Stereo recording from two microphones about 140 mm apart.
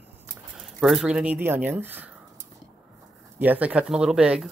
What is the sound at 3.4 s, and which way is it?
Speech, 10° right (ahead or behind).